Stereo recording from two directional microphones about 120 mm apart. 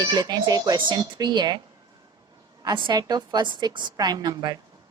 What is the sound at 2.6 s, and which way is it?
Speech, 40° right (ahead or behind).